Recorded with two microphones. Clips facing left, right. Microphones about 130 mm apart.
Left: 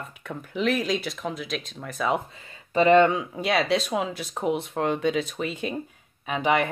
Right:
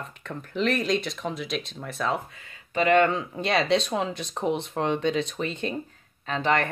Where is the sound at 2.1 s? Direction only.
30° left (ahead or behind).